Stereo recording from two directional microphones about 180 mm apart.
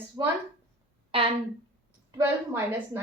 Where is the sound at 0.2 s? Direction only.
25° right (ahead or behind).